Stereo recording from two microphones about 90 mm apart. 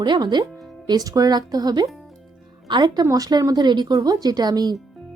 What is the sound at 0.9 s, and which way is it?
A woman's voice, 45° right (ahead or behind).